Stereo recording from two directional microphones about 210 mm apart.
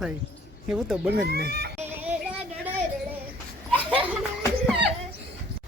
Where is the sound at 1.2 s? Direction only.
50° right (ahead or behind).